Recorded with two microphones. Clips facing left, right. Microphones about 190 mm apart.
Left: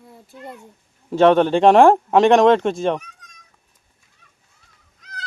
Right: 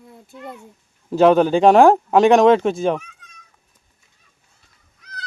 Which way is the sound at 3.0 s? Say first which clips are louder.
Even; 40° left (ahead or behind).